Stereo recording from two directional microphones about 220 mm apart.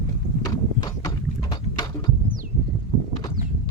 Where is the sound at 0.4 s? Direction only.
15° left (ahead or behind).